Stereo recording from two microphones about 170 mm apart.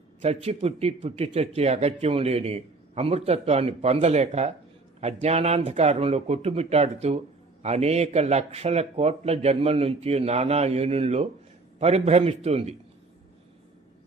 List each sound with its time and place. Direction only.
0.2 s speech: 40° right (ahead or behind)